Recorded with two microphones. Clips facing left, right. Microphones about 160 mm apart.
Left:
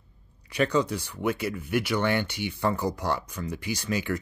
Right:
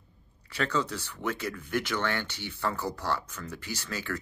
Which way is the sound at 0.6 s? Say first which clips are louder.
Left 5 dB; 15° left (ahead or behind).